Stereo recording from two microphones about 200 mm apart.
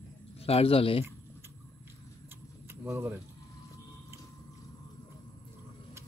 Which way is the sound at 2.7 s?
10° right (ahead or behind).